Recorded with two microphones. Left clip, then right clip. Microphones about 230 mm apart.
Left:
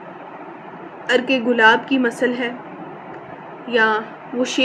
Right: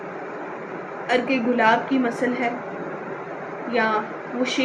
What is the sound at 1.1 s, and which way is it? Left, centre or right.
A woman's voice, left.